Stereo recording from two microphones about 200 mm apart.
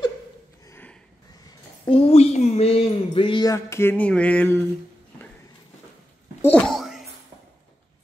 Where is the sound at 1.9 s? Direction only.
30° left (ahead or behind); by 4.6 s 5° left (ahead or behind).